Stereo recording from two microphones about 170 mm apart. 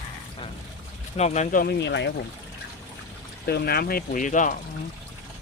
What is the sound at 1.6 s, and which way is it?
Speech, 90° left.